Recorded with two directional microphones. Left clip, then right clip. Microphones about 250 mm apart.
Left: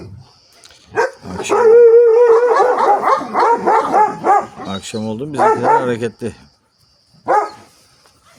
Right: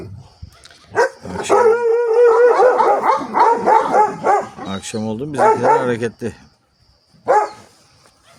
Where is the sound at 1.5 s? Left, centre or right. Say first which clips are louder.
Even; centre.